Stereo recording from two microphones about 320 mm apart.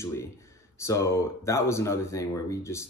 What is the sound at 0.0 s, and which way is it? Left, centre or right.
Speech, centre.